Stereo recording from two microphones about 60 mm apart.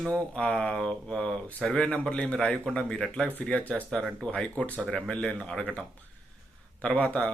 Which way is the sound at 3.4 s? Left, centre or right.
Left.